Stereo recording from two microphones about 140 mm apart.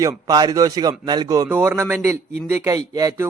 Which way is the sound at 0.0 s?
25° right (ahead or behind).